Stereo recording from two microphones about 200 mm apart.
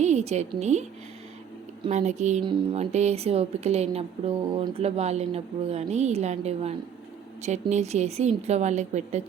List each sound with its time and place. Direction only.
0.0 s a woman's voice: 35° right (ahead or behind)